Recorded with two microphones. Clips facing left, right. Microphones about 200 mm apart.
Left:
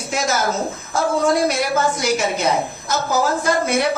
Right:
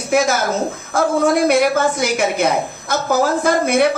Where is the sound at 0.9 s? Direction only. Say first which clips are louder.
Right 2 dB; 55° right (ahead or behind).